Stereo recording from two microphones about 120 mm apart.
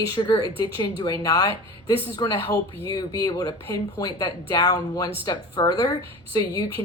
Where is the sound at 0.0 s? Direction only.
40° left (ahead or behind).